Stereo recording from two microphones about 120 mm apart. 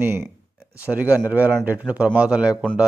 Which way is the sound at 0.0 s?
20° right (ahead or behind).